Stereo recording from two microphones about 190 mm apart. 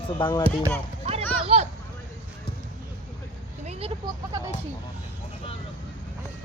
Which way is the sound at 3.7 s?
30° right (ahead or behind).